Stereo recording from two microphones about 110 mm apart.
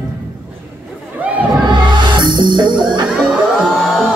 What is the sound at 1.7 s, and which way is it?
Music, 45° right (ahead or behind).